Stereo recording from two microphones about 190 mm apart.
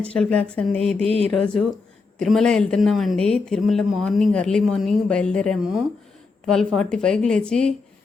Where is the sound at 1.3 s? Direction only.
5° left (ahead or behind).